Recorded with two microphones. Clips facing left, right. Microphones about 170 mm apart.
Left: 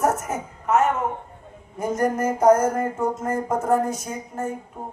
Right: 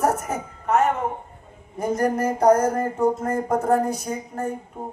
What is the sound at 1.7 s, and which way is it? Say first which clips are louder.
A man's voice: right 1 dB; 35° right (ahead or behind).